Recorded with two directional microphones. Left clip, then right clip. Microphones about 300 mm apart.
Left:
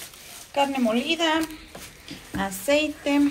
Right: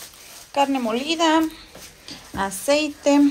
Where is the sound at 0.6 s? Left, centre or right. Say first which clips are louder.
Right 2 dB; centre.